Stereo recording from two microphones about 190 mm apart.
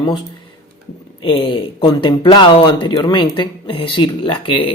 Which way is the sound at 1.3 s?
25° left (ahead or behind).